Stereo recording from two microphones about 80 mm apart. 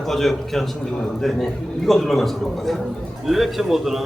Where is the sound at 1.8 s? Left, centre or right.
Centre.